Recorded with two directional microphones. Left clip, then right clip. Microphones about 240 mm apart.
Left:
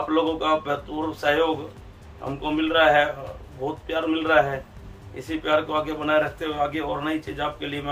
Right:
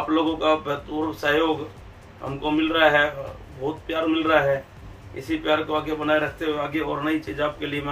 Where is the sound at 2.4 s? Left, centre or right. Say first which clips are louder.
Even; centre.